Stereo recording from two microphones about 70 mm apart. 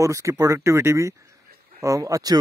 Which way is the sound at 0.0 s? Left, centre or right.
Right.